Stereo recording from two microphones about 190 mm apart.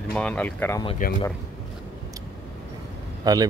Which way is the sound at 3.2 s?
20° right (ahead or behind).